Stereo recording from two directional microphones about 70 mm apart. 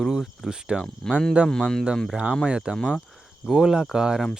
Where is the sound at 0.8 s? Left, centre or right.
Centre.